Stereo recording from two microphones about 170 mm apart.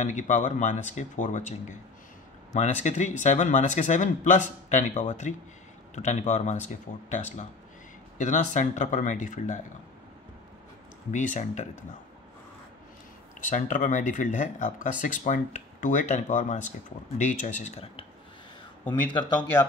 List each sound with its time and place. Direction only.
0.0 s speech: 45° left (ahead or behind)
11.1 s speech: 45° left (ahead or behind)
13.5 s speech: 50° left (ahead or behind)
18.9 s speech: 25° left (ahead or behind)